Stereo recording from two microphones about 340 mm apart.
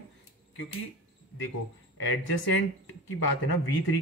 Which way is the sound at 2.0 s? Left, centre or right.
Left.